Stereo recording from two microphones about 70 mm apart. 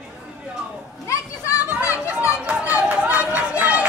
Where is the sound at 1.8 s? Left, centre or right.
Left.